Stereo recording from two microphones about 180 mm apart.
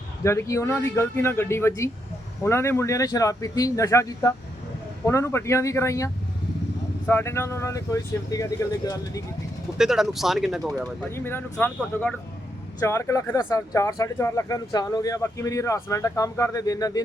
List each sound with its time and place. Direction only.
0.3 s speech: 15° left (ahead or behind)
7.1 s speech: 15° left (ahead or behind)
9.7 s speech: centre (ahead or behind)
11.1 s speech: 10° left (ahead or behind)